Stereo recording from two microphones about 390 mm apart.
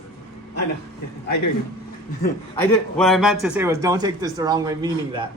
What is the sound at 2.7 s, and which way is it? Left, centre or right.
A man's voice, centre.